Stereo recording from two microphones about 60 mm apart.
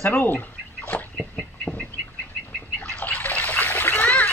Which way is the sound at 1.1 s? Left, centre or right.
Centre.